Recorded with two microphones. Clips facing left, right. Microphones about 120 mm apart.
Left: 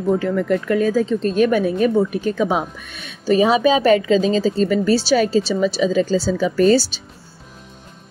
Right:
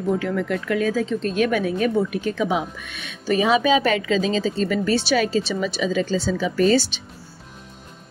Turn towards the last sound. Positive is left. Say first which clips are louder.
# left 3 dB
turn(degrees=40)  # may be behind; listen again after turning